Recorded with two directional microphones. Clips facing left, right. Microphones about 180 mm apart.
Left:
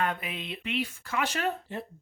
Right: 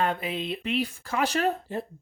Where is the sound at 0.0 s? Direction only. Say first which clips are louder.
Right 4 dB; 30° right (ahead or behind).